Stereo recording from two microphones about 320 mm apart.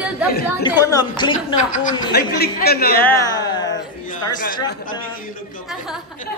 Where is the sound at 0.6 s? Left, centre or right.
Centre; by 3.0 s left.